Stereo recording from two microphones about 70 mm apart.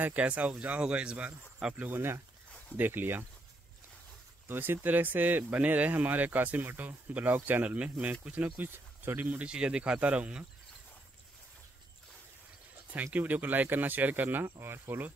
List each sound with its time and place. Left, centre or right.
0.0 s speech: right
1.8 s speech: right
4.5 s speech: right
9.4 s speech: centre
12.9 s speech: right